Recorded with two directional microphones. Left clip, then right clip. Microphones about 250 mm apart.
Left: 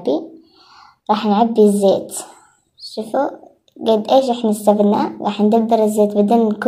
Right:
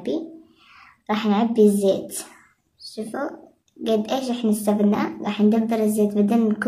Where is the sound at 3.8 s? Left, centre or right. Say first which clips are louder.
Left 9 dB; centre.